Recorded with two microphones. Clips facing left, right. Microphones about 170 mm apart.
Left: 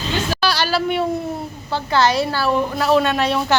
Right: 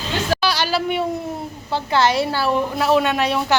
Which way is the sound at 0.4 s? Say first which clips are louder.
Left 1 dB; 20° right (ahead or behind).